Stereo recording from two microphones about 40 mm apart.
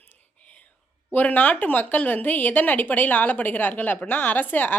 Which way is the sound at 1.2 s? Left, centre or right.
Left.